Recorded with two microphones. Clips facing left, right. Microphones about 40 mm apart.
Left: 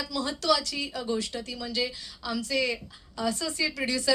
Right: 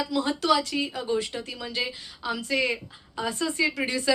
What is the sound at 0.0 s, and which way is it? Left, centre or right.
A woman's voice, right.